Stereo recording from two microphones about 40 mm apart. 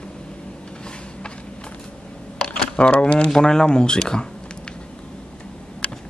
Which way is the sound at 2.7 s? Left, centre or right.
Left.